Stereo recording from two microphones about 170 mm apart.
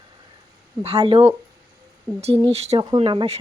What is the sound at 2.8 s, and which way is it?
Speech, 25° right (ahead or behind).